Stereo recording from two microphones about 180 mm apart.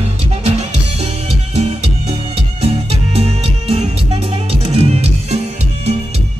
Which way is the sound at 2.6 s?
35° right (ahead or behind).